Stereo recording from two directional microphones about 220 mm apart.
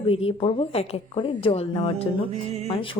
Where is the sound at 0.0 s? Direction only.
25° left (ahead or behind).